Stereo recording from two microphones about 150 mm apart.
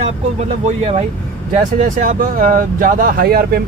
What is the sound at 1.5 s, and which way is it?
Speech, 60° right (ahead or behind).